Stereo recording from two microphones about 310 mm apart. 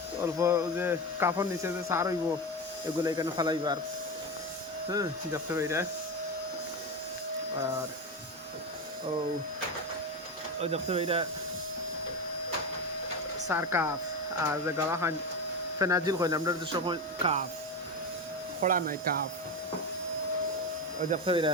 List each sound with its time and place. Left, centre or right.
0.3 s speech: centre
4.9 s speech: centre
10.6 s speech: centre
13.5 s speech: centre
18.6 s speech: right
21.1 s speech: centre